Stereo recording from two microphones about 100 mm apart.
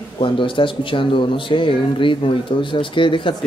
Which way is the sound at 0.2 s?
55° left (ahead or behind).